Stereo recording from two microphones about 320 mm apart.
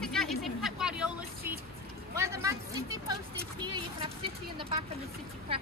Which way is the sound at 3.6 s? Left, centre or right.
Centre.